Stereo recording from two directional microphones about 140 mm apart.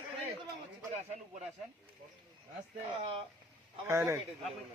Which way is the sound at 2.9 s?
40° right (ahead or behind).